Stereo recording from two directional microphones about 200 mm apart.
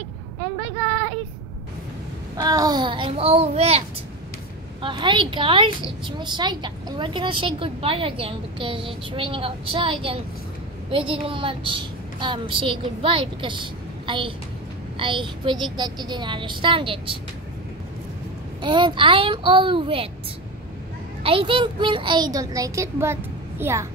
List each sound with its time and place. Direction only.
2.3 s a child's voice: 20° right (ahead or behind)
4.8 s a woman's voice: 25° right (ahead or behind)
18.6 s a woman's voice: 25° right (ahead or behind)
21.2 s a woman's voice: 25° right (ahead or behind)